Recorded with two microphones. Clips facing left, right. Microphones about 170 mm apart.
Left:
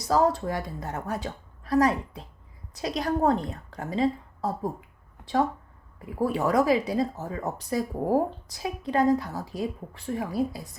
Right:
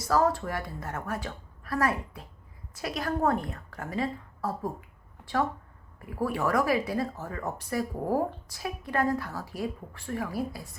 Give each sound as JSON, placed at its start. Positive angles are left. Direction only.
{"t": 0.1, "sound": "a woman's voice", "side_deg": 20}
{"t": 6.0, "sound": "a woman's voice", "side_deg": 20}